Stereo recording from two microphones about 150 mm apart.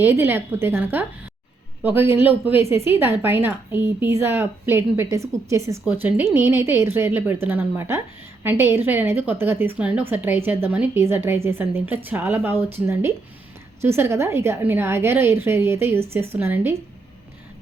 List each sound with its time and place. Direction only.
0.0 s a woman's voice: 15° right (ahead or behind)